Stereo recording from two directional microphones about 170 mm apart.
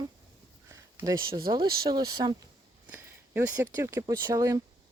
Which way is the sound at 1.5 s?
25° right (ahead or behind).